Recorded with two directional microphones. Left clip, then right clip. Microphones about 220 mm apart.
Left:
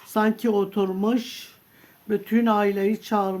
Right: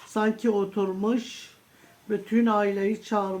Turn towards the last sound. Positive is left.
turn(degrees=45)  # may be behind; listen again after turning